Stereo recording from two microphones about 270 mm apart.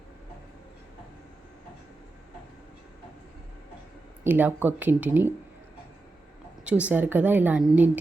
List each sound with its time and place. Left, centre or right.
4.2 s speech: centre
6.7 s a woman's voice: centre